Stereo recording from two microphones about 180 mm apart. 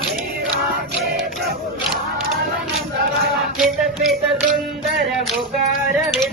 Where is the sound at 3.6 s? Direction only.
Centre (ahead or behind).